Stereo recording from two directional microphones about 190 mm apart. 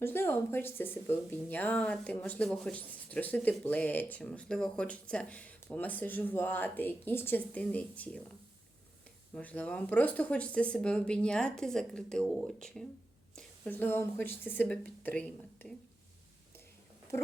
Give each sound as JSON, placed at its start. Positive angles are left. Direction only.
{"t": 0.0, "sound": "a woman's voice", "side_deg": 10}
{"t": 9.3, "sound": "speech", "side_deg": 5}